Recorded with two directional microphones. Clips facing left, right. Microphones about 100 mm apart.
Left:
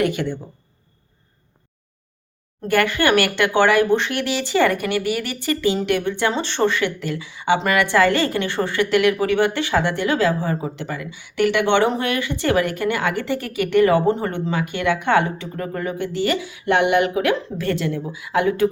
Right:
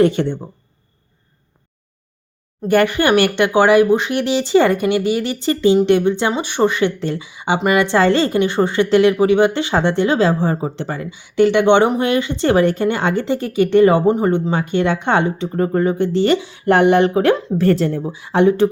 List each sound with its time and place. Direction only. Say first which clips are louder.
0.0 s speech: right 6 dB; 30° right (ahead or behind)
2.6 s speech: right 4 dB; 20° right (ahead or behind)
11.1 s speech: right 6 dB; 20° right (ahead or behind)